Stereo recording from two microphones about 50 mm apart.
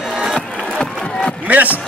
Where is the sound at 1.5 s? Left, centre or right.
Right.